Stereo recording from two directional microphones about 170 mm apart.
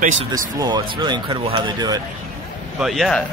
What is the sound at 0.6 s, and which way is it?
Speech, 25° right (ahead or behind).